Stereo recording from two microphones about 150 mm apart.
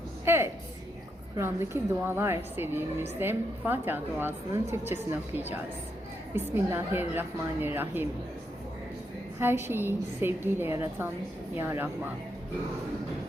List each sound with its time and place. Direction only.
0.3 s a woman's voice: 15° right (ahead or behind)
6.3 s a woman's voice: 15° right (ahead or behind)
9.4 s a woman's voice: 15° right (ahead or behind)